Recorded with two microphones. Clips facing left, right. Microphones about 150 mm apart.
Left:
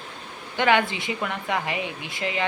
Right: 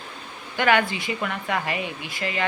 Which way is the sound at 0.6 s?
20° left (ahead or behind).